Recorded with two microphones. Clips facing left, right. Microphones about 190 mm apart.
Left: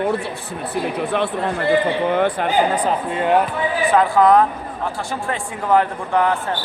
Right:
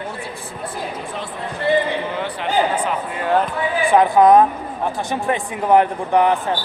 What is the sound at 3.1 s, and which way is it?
Speech, 25° left (ahead or behind).